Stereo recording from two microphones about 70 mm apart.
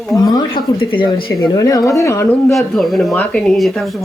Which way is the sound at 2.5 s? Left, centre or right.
Centre.